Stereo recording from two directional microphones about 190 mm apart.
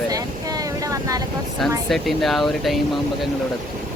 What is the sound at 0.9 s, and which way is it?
Vehicle, 15° right (ahead or behind).